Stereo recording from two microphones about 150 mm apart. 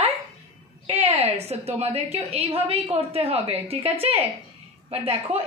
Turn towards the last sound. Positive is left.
turn(degrees=-40)  # may be behind; listen again after turning